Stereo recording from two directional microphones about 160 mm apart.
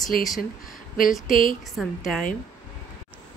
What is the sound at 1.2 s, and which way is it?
Speech, 60° left (ahead or behind).